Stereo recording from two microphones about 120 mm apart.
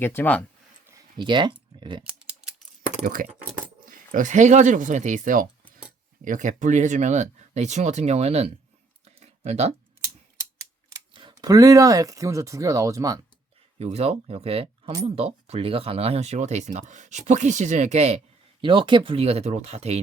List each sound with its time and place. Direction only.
0.0 s speech: 20° left (ahead or behind)
1.2 s speech: 40° right (ahead or behind)
2.1 s typing: 5° right (ahead or behind)
3.2 s speech: 90° right; by 8.4 s 60° right (ahead or behind)
9.0 s a sound: 65° right (ahead or behind)
11.1 s speech: 45° right (ahead or behind)
13.7 s speech: 65° right (ahead or behind)
18.6 s speech: 40° right (ahead or behind); by 20.0 s 65° right (ahead or behind)